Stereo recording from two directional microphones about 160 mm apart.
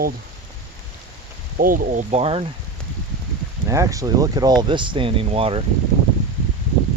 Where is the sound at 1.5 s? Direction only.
60° right (ahead or behind); by 2.4 s 40° right (ahead or behind).